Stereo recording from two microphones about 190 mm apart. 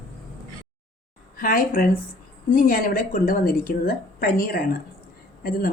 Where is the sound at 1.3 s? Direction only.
50° left (ahead or behind).